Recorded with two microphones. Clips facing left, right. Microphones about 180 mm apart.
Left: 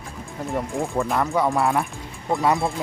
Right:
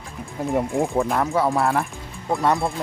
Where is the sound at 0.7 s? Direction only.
15° right (ahead or behind).